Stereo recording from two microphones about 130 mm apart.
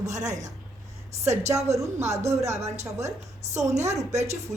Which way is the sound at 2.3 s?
25° right (ahead or behind).